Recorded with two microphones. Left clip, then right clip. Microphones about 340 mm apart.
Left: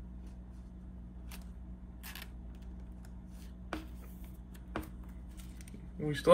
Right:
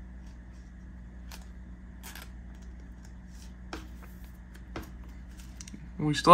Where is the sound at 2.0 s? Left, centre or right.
Centre.